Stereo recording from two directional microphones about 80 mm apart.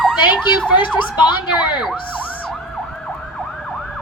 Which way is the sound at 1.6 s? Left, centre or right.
Left.